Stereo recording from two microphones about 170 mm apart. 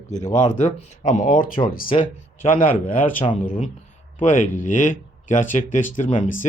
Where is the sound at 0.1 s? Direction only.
45° left (ahead or behind).